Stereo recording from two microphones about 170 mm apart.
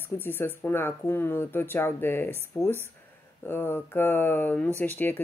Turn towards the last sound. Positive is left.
turn(degrees=10)  # may be behind; listen again after turning